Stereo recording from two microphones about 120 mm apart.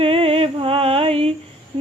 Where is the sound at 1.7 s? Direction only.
50° right (ahead or behind).